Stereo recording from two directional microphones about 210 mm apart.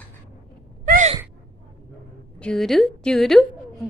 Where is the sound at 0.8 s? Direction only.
35° right (ahead or behind).